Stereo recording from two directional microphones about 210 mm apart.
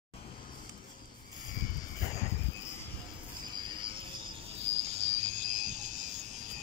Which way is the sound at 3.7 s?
20° right (ahead or behind).